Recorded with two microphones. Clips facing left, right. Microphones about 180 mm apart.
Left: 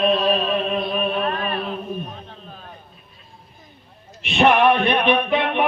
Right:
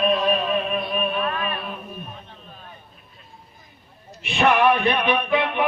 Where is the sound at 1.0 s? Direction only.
30° left (ahead or behind).